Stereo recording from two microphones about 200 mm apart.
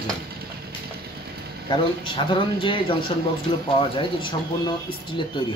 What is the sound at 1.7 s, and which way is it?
Speech, 25° left (ahead or behind).